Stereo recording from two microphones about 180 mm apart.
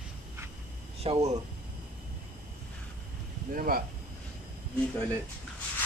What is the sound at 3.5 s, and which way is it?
Speech, 50° right (ahead or behind).